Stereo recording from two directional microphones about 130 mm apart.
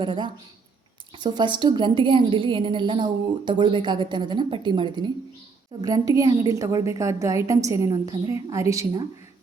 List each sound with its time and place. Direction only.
0.0 s a woman's voice: 35° right (ahead or behind)